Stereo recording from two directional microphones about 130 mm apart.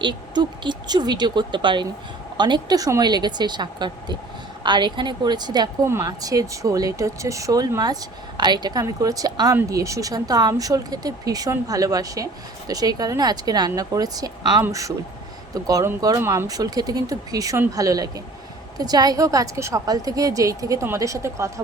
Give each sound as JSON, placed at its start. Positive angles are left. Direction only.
{"t": 0.0, "sound": "speech", "side_deg": -35}
{"t": 5.8, "sound": "speech", "side_deg": -20}
{"t": 16.2, "sound": "speech", "side_deg": -20}
{"t": 16.5, "sound": "speech", "side_deg": -30}